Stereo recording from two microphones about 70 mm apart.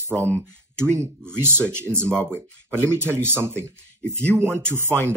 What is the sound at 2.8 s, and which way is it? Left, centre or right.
Speech, right.